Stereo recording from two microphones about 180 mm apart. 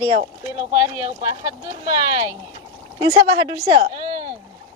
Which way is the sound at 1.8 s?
20° right (ahead or behind).